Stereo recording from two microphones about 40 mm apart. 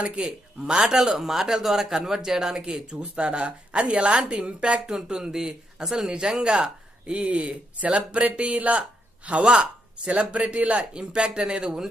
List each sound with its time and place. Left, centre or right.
0.0 s speech: right
1.1 s speech: centre; by 4.9 s right
4.9 s speech: centre